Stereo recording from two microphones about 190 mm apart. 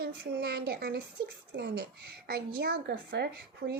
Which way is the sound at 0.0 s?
55° right (ahead or behind).